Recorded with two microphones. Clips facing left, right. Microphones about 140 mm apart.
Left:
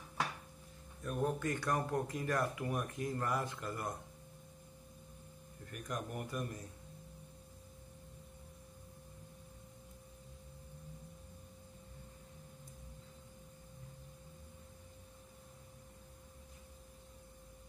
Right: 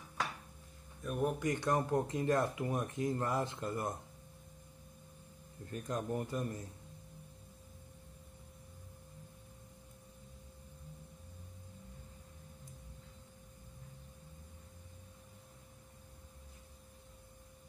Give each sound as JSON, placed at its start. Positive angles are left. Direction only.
{"t": 1.0, "sound": "speech", "side_deg": -5}
{"t": 1.4, "sound": "speech", "side_deg": -20}
{"t": 5.7, "sound": "speech", "side_deg": -25}